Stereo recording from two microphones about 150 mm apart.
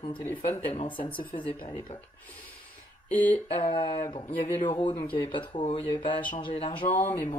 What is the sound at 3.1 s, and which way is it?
Speech, 10° left (ahead or behind).